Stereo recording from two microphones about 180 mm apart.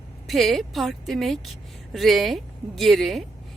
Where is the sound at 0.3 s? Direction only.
Centre (ahead or behind).